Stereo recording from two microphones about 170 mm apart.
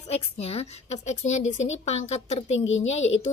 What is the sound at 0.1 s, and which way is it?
A woman's voice, 35° left (ahead or behind).